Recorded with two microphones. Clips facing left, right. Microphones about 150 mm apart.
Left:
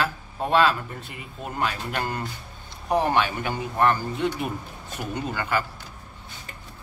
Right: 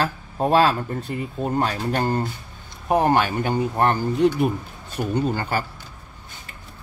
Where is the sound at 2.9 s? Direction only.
45° right (ahead or behind).